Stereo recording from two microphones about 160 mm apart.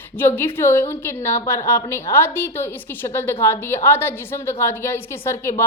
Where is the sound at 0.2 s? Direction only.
15° left (ahead or behind).